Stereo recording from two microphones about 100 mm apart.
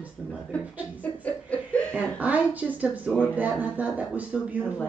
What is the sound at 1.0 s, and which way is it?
Chuckle, 15° left (ahead or behind).